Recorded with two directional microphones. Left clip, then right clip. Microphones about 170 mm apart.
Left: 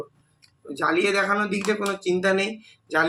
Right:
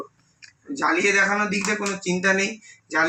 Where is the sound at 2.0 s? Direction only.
10° right (ahead or behind).